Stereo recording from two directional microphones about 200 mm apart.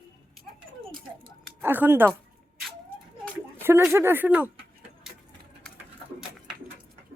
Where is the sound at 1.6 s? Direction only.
10° right (ahead or behind).